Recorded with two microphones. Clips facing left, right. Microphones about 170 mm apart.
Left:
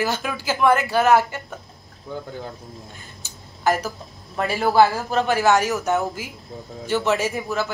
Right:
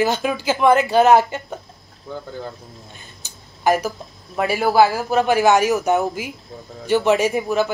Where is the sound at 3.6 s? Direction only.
15° right (ahead or behind).